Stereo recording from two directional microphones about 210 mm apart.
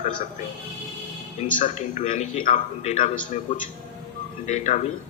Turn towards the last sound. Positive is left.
turn(degrees=35)  # may be behind; listen again after turning